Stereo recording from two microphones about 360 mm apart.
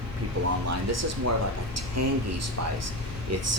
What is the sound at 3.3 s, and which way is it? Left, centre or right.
Speech, right.